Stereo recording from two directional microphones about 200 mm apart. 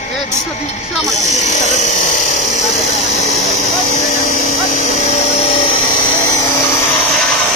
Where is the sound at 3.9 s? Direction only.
40° left (ahead or behind); by 6.1 s 25° left (ahead or behind).